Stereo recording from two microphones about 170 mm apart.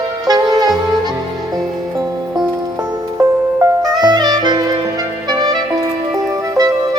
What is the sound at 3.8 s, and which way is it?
Saxophone, 25° right (ahead or behind).